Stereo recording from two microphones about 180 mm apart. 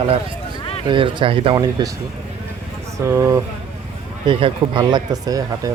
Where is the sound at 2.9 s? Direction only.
15° right (ahead or behind).